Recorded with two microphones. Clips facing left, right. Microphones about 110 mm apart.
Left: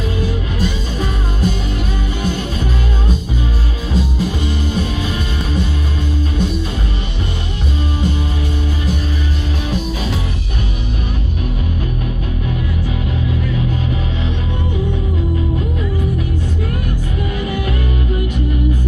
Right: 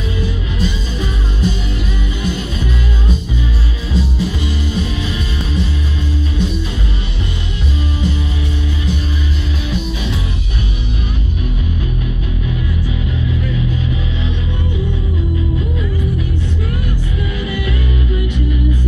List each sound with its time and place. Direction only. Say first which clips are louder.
0.2 s music: left 1 dB; 50° left (ahead or behind)
4.7 s music: left 1 dB; 50° left (ahead or behind)